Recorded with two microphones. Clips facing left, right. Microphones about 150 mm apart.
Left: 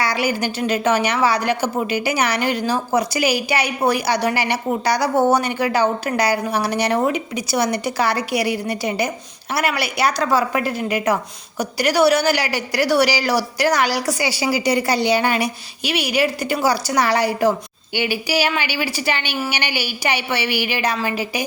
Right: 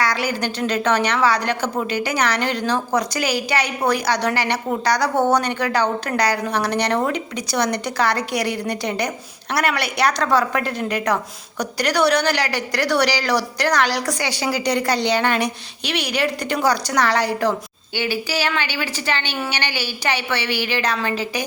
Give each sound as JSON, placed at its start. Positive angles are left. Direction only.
{"t": 0.0, "sound": "a woman's voice", "side_deg": 10}